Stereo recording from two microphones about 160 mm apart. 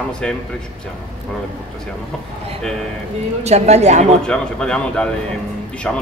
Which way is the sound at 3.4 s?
40° right (ahead or behind).